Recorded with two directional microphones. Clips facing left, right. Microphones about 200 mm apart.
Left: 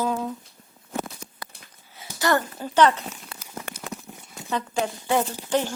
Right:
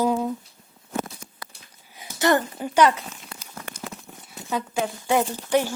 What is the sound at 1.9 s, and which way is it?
A child's voice, 20° right (ahead or behind).